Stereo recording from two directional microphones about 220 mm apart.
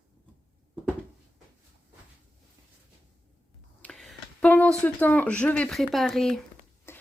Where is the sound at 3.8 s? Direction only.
Centre (ahead or behind).